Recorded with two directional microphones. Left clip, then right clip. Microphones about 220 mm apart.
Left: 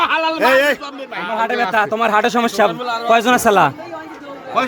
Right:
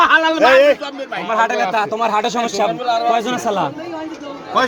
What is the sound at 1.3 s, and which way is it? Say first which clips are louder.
A man's voice: even; 25° left (ahead or behind).